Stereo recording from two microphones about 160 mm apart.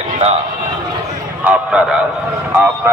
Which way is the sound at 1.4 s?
5° right (ahead or behind).